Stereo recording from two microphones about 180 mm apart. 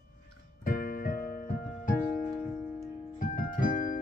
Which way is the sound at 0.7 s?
50° left (ahead or behind).